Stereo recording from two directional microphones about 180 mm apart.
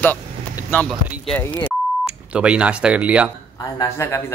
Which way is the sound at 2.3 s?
5° right (ahead or behind).